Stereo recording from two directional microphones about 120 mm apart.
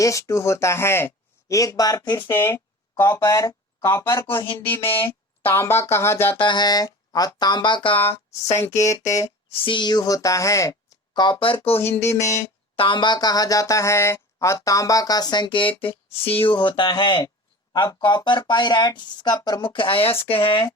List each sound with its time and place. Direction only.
0.0 s speech: 25° left (ahead or behind)
2.3 s speech: 20° left (ahead or behind)
5.5 s speech: 20° left (ahead or behind)
6.3 s speech: 40° left (ahead or behind); by 8.6 s 60° left (ahead or behind)
8.6 s speech: 25° left (ahead or behind)
9.5 s speech: 45° left (ahead or behind)
11.8 s speech: 20° left (ahead or behind)
12.7 s speech: 45° left (ahead or behind)